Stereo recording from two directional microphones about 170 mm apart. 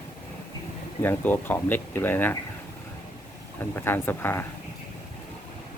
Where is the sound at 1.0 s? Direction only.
10° left (ahead or behind).